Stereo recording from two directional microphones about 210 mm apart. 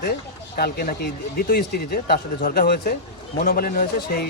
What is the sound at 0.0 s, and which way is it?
Speech, 45° left (ahead or behind).